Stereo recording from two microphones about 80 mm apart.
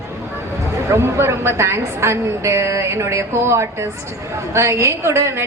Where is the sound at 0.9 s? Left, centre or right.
Right.